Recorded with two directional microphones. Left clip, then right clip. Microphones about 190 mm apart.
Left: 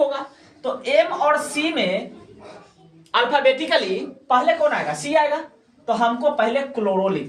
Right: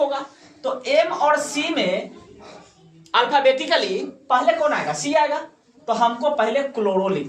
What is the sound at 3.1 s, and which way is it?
A woman's voice, 20° right (ahead or behind).